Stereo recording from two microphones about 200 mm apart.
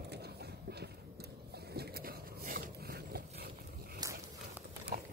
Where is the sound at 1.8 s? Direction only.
45° right (ahead or behind).